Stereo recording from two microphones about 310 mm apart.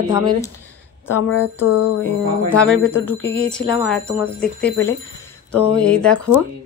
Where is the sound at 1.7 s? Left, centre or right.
Left.